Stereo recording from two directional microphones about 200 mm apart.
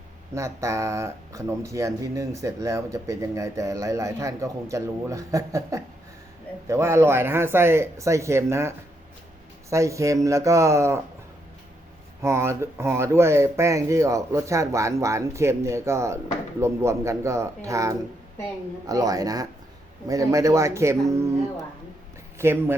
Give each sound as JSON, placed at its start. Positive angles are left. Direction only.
{"t": 0.3, "sound": "speech", "side_deg": -15}
{"t": 12.2, "sound": "speech", "side_deg": -15}
{"t": 22.4, "sound": "speech", "side_deg": -10}